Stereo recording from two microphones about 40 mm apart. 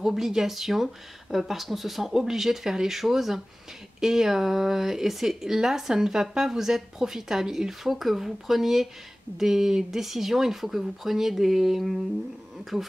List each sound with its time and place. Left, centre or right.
0.0 s speech: centre